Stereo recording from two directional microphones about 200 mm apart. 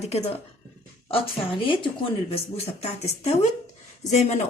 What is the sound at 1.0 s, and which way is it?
A woman's voice, 25° left (ahead or behind).